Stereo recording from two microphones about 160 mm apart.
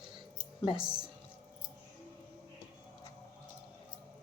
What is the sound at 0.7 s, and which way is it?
Speech, 5° right (ahead or behind).